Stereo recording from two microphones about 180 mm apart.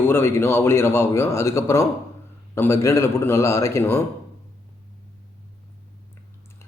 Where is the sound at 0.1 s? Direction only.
15° left (ahead or behind).